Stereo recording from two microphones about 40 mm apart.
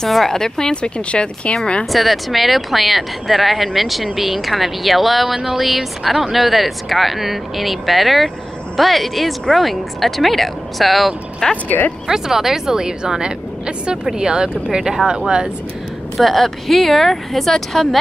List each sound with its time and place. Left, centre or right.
0.1 s speech: centre; by 1.5 s left
1.9 s a woman's voice: centre
16.2 s speech: centre